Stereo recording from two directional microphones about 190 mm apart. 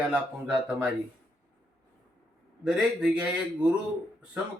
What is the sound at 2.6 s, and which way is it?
A man's voice, 5° right (ahead or behind).